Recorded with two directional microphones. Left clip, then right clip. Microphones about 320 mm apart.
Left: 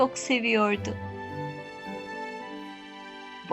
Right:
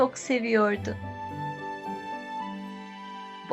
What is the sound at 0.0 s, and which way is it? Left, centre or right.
Speech, left.